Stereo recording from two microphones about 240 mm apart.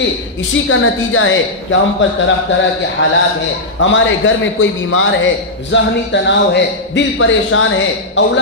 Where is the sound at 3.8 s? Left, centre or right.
Left.